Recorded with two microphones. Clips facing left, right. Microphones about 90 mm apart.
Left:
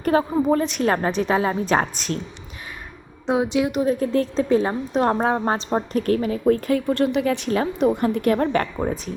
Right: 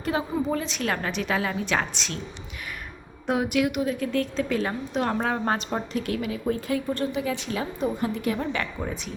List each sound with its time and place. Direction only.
0.0 s speech: 50° left (ahead or behind)
0.9 s a woman's voice: 40° left (ahead or behind)
3.2 s speech: 20° left (ahead or behind)
3.7 s a woman's voice: 35° left (ahead or behind)
5.9 s speech: 45° left (ahead or behind)
6.9 s a woman's voice: 70° left (ahead or behind)
8.6 s a woman's voice: 40° left (ahead or behind)